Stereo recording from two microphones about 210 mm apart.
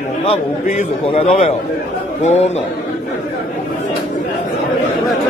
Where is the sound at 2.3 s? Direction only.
30° left (ahead or behind).